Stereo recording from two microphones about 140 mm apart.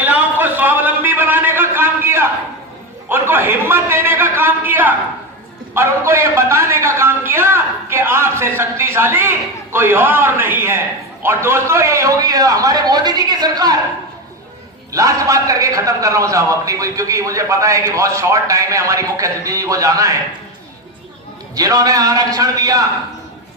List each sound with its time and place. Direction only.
0.0 s a sound: 10° right (ahead or behind)
5.7 s a man's voice: 20° right (ahead or behind)
14.9 s a man's voice: 25° right (ahead or behind)
21.5 s a man's voice: 25° right (ahead or behind)